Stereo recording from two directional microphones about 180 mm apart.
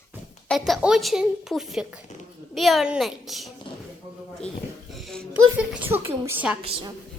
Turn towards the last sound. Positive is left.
turn(degrees=-30)  # may be behind; listen again after turning